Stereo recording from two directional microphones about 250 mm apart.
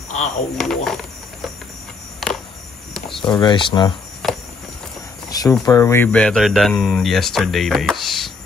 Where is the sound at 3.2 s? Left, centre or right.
Centre.